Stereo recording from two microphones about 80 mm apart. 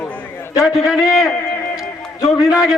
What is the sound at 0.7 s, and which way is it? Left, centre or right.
Speech, centre.